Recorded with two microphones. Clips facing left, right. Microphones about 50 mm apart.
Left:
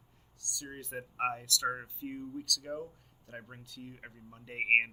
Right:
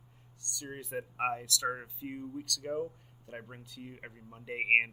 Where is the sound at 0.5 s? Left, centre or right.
Centre.